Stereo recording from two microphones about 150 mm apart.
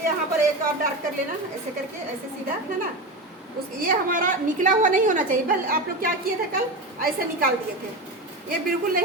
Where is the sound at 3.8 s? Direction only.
65° right (ahead or behind).